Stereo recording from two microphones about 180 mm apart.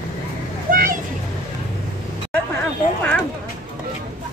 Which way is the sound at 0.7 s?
50° right (ahead or behind).